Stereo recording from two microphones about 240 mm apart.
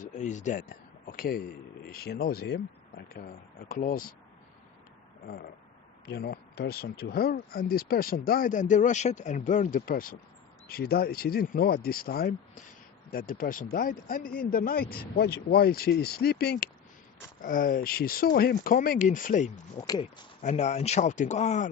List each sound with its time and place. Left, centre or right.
0.0 s speech: left
3.7 s speech: left
6.1 s speech: left
19.8 s speech: centre
20.4 s speech: left